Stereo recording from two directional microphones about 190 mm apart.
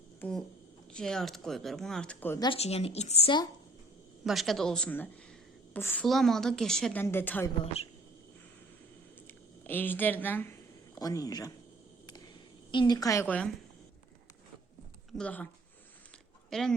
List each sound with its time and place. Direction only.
0.2 s speech: 5° left (ahead or behind)
2.4 s a woman's voice: 30° left (ahead or behind)
4.2 s a woman's voice: centre (ahead or behind)
7.6 s a woman's voice: 30° left (ahead or behind)
9.2 s speech: 10° left (ahead or behind)
12.7 s a woman's voice: 20° left (ahead or behind)
15.1 s a woman's voice: 5° left (ahead or behind)
16.5 s speech: centre (ahead or behind)